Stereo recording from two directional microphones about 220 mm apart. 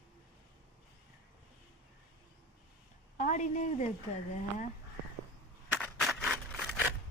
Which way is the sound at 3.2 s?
35° left (ahead or behind).